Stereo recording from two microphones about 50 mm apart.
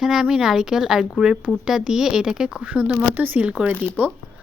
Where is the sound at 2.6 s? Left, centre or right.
Right.